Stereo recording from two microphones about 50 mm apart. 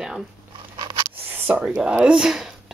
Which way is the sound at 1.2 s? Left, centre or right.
Right.